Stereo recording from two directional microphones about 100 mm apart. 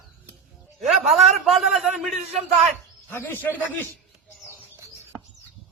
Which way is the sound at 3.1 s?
20° left (ahead or behind).